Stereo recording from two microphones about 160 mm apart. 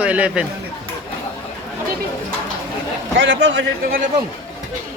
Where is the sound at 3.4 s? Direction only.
90° right.